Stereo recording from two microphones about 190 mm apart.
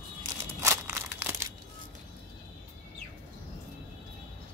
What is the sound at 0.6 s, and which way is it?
Crumpling, 15° right (ahead or behind).